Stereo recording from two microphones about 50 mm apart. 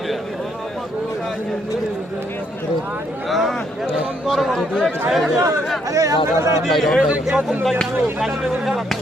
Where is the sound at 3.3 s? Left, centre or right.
Centre.